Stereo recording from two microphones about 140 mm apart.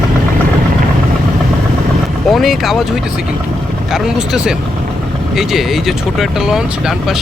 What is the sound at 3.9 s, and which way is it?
Speech, 5° right (ahead or behind).